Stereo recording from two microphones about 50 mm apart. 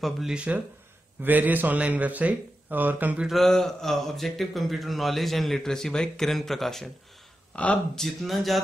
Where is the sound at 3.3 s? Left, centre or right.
Centre.